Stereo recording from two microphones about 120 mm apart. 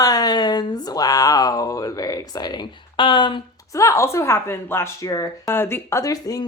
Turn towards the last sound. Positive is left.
turn(degrees=30)  # may be behind; listen again after turning